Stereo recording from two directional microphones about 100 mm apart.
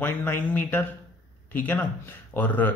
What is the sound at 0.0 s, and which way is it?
Speech, 20° left (ahead or behind).